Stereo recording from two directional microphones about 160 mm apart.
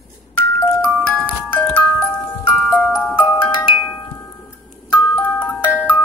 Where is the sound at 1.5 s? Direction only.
10° left (ahead or behind).